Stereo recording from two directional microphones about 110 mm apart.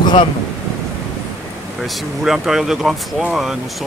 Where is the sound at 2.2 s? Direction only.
5° right (ahead or behind).